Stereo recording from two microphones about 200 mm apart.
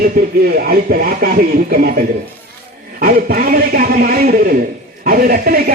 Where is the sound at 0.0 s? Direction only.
50° right (ahead or behind).